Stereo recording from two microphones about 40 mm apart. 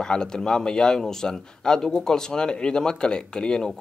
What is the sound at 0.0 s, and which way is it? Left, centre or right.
A man's voice, centre.